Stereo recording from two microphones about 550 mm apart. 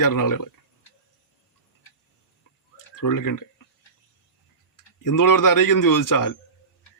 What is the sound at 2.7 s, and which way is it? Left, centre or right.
Clicking, left.